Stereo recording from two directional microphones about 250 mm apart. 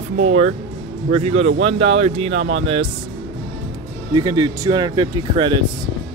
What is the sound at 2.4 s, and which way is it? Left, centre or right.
Speech, right.